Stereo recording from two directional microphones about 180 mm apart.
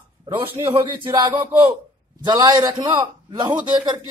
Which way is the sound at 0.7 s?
25° right (ahead or behind).